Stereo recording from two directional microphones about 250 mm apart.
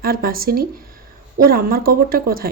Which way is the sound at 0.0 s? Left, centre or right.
Right.